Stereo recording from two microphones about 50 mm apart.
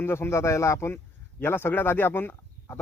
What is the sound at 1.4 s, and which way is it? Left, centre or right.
Speech, left.